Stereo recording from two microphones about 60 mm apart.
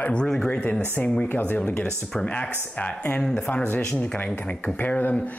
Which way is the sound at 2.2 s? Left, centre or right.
Centre.